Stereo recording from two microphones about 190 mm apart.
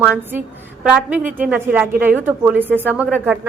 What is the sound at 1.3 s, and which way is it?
A woman's voice, 10° right (ahead or behind).